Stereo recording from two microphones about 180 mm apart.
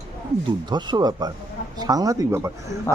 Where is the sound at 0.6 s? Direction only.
25° right (ahead or behind).